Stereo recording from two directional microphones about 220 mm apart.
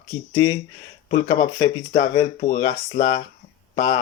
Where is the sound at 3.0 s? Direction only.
35° left (ahead or behind).